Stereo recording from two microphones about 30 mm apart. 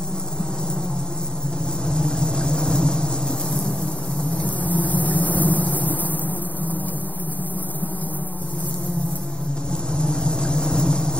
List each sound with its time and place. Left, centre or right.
1.9 s vehicle: left
4.6 s vehicle: left
9.9 s vehicle: left